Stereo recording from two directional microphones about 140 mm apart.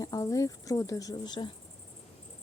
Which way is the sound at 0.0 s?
25° left (ahead or behind).